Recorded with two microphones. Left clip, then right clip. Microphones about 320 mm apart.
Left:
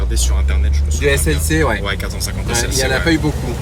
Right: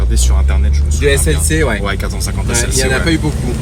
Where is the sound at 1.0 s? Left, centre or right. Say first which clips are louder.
Right 2 dB; centre.